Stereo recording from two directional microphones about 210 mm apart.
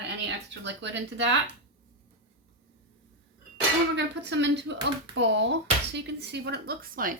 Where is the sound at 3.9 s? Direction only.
60° right (ahead or behind); by 7.2 s 40° right (ahead or behind).